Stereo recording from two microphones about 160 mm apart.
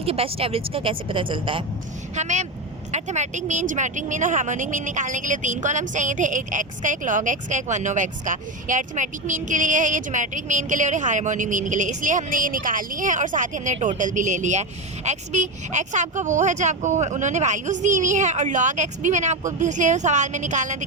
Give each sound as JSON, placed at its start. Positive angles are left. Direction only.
{"t": 0.0, "sound": "a woman's voice", "side_deg": -35}
{"t": 2.1, "sound": "speech", "side_deg": -45}